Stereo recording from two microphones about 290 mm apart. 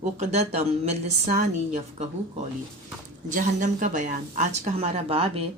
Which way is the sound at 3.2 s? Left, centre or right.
Right.